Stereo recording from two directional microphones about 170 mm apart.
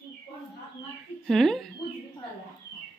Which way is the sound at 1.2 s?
Centre (ahead or behind).